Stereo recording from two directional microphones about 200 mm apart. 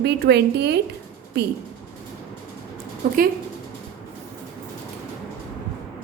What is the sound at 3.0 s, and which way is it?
Speech, 45° right (ahead or behind).